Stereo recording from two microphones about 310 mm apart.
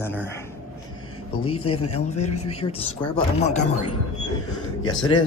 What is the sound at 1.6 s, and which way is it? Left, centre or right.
Speech, left.